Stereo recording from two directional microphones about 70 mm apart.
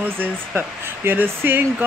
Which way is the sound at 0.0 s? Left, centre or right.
Right.